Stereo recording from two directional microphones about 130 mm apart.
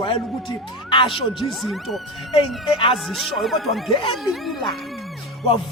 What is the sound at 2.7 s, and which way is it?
Speech, 45° left (ahead or behind).